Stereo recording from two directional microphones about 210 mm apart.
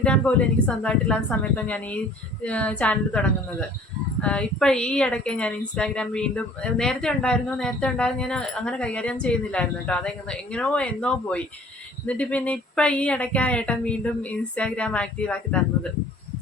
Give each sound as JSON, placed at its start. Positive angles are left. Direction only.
{"t": 0.0, "sound": "speech", "side_deg": 5}